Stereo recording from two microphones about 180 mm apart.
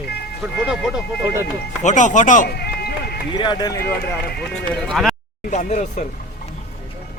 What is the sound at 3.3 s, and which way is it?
Speech, 25° left (ahead or behind).